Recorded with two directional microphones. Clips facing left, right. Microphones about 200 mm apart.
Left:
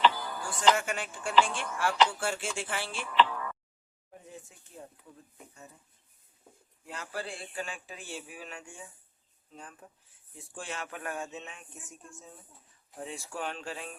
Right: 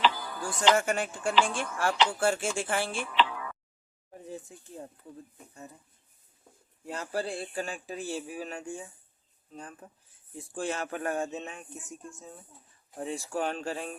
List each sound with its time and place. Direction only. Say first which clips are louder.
0.0 s music: left 1 dB; centre (ahead or behind)
0.8 s speech: right 6 dB; 45° right (ahead or behind)
3.2 s a sound: left 2 dB; 5° right (ahead or behind)
6.8 s speech: right 6 dB; 40° right (ahead or behind)
13.1 s speech: right 7 dB; 40° right (ahead or behind)